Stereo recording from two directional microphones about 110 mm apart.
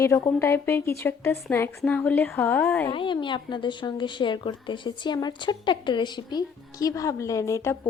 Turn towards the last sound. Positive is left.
turn(degrees=25)  # may be behind; listen again after turning